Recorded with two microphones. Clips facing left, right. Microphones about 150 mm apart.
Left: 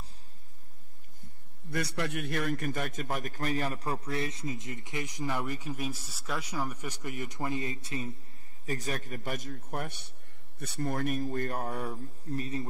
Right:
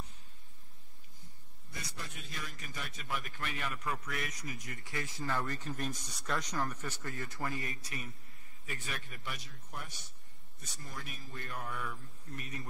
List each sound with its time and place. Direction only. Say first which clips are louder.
1.7 s a man's voice: left 14 dB; 70° left (ahead or behind); by 8.1 s 25° left (ahead or behind)
8.6 s speech: left 9 dB; 40° left (ahead or behind)